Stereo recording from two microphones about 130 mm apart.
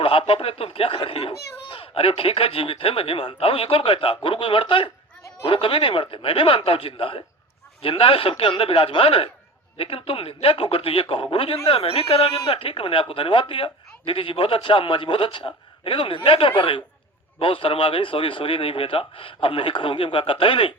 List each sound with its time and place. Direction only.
0.0 s a man's voice: 45° left (ahead or behind)